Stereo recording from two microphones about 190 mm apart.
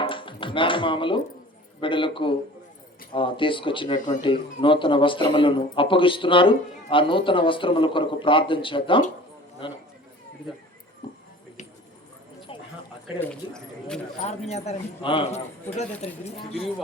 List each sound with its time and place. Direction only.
0.0 s chopping: 25° left (ahead or behind)
1.8 s speech: 25° left (ahead or behind)
11.0 s a sound: 25° left (ahead or behind)
12.5 s clip-clop: 30° left (ahead or behind)
13.1 s speech: 5° left (ahead or behind)
14.2 s speech: 35° left (ahead or behind)